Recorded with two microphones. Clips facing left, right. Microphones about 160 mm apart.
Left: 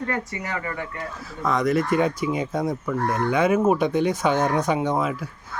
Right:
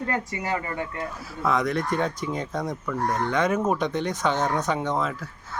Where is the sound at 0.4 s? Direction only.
30° right (ahead or behind).